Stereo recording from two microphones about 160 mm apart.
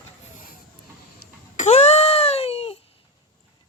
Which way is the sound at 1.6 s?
40° left (ahead or behind).